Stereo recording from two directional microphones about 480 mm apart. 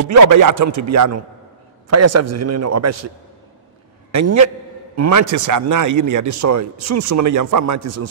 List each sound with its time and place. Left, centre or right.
0.0 s speech: right
4.1 s speech: right